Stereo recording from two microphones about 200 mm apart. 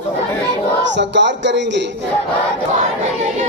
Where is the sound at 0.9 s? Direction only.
60° right (ahead or behind).